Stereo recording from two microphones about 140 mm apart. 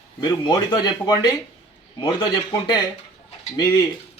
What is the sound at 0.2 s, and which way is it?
Speech, 30° left (ahead or behind).